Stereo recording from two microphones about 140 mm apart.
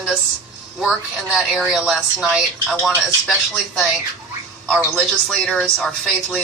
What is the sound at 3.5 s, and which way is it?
Speech, centre (ahead or behind).